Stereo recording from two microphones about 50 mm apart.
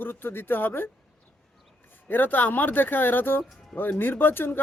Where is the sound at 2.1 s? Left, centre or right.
Left.